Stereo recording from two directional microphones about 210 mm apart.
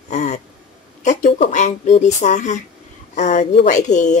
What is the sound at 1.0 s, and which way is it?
Speech, 35° left (ahead or behind).